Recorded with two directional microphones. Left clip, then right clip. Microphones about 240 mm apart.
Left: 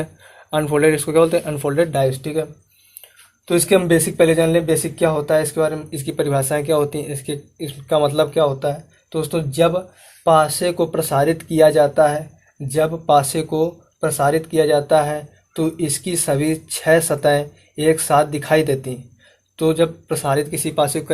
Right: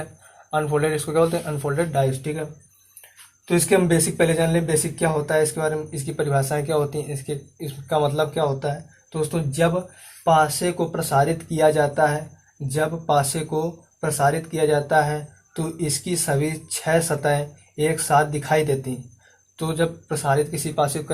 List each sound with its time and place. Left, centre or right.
0.5 s speech: left
3.5 s speech: left